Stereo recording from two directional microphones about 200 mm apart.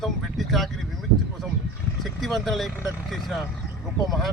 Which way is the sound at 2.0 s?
Centre (ahead or behind).